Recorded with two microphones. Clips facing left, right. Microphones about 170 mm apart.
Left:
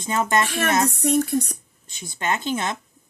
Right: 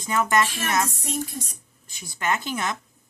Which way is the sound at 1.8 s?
25° left (ahead or behind).